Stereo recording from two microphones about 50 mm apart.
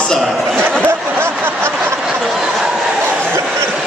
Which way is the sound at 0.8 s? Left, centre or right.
Right.